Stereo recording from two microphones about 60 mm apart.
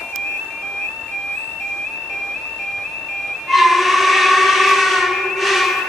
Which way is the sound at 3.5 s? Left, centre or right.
Centre.